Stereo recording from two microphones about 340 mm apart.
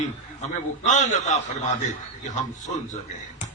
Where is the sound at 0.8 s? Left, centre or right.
Left.